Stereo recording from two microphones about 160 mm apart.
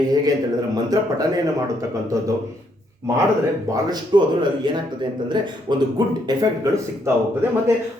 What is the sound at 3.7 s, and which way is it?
Speech, 25° right (ahead or behind).